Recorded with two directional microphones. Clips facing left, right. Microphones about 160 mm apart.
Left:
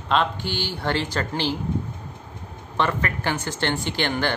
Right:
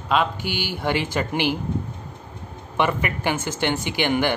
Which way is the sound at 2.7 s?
15° right (ahead or behind).